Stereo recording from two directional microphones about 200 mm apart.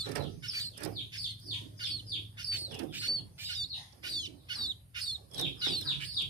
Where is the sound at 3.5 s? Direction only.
20° right (ahead or behind).